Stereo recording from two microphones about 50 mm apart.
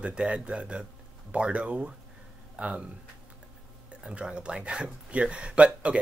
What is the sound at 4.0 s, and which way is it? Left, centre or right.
Speech, centre.